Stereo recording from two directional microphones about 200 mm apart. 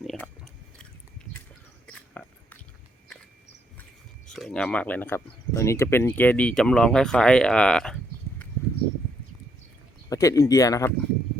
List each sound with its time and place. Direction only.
0.0 s chewing: centre (ahead or behind)
1.9 s a sound: 5° left (ahead or behind)
4.3 s speech: 5° left (ahead or behind)
10.1 s speech: 15° left (ahead or behind)